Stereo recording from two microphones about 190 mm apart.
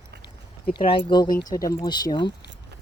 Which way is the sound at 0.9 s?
25° left (ahead or behind).